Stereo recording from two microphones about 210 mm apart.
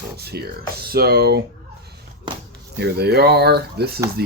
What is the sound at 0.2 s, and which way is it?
Speech, 50° right (ahead or behind).